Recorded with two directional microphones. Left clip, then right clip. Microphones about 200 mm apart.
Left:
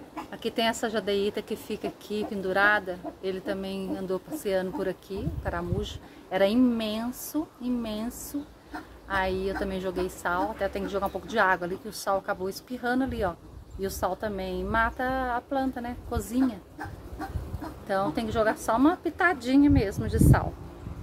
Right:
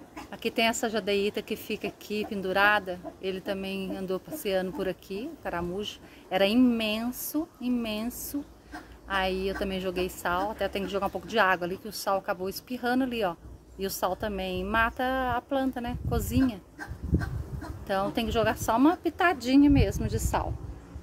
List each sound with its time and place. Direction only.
0.3 s a woman's voice: 20° right (ahead or behind)
17.8 s a woman's voice: 25° right (ahead or behind)